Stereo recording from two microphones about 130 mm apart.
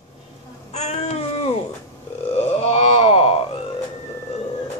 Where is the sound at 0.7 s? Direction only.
55° left (ahead or behind).